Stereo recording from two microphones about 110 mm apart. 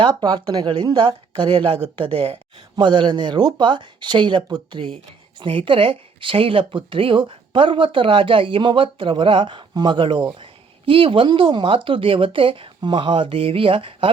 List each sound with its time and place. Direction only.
0.0 s speech: 45° right (ahead or behind)
5.4 s speech: 55° right (ahead or behind)